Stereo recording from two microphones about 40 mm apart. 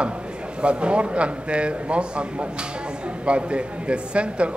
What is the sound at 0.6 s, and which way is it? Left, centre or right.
A man's voice, right.